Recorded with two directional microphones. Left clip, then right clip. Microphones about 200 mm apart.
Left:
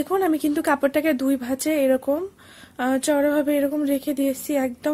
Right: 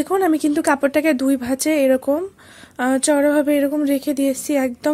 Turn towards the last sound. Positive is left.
turn(degrees=-15)  # may be behind; listen again after turning